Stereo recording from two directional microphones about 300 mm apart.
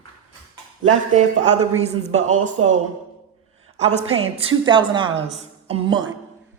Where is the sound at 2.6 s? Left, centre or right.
Right.